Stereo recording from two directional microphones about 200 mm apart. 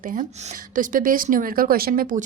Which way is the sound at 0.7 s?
45° right (ahead or behind).